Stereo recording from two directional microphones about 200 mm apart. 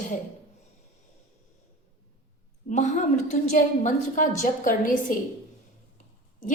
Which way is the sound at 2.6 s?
35° left (ahead or behind).